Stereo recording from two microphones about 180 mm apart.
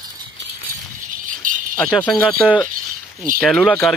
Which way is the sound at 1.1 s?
50° right (ahead or behind).